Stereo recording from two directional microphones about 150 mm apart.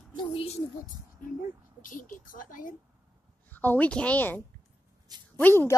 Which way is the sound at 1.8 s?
65° left (ahead or behind).